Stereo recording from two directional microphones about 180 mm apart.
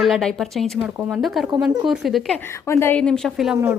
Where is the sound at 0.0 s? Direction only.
Centre (ahead or behind).